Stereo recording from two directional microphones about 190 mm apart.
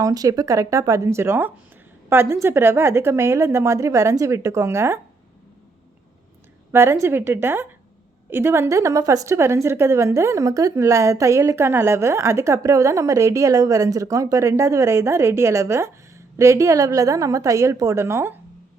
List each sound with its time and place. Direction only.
0.0 s a woman's voice: 20° right (ahead or behind)
6.7 s a woman's voice: 15° right (ahead or behind)